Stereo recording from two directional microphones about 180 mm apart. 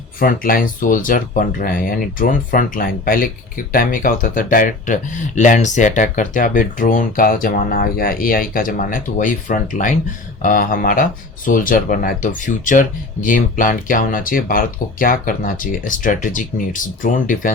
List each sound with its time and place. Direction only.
0.2 s speech: 50° left (ahead or behind)